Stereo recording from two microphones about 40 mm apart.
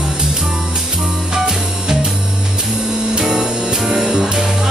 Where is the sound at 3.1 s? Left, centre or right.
Centre.